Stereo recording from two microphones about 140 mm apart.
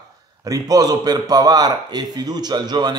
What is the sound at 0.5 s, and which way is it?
A man's voice, 25° right (ahead or behind).